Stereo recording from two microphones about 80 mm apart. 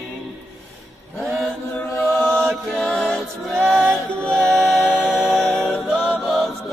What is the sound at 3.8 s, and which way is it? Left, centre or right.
Music, centre.